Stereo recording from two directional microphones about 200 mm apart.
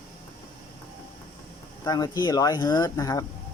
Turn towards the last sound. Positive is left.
turn(degrees=15)  # may be behind; listen again after turning